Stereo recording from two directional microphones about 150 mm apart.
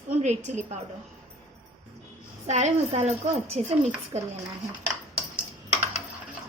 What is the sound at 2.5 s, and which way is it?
A woman's voice, 45° right (ahead or behind).